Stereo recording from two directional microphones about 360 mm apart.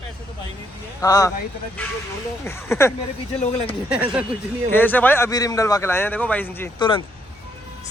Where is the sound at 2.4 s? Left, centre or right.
Centre.